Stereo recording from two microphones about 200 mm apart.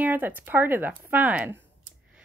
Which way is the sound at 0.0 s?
10° right (ahead or behind).